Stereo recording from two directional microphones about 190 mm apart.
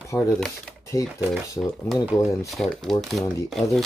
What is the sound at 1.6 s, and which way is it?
Speech, centre (ahead or behind).